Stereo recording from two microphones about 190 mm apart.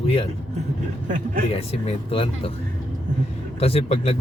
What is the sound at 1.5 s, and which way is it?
Speech, 30° left (ahead or behind).